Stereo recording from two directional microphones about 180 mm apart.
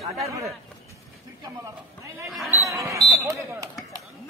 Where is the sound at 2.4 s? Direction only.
15° right (ahead or behind).